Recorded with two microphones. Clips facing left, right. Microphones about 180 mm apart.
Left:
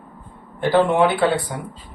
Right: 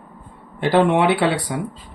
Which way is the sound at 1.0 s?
90° right.